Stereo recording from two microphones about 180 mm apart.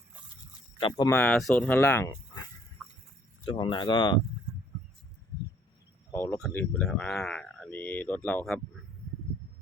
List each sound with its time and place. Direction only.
0.8 s speech: 30° left (ahead or behind)
1.0 s speech: 10° left (ahead or behind)
2.8 s chicken: centre (ahead or behind)
3.4 s speech: 25° left (ahead or behind)
6.1 s speech: 15° left (ahead or behind)